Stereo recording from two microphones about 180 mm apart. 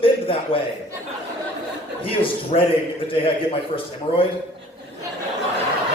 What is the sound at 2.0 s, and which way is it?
A man's voice, 30° left (ahead or behind).